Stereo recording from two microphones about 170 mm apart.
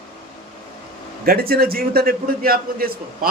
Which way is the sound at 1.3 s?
60° right (ahead or behind).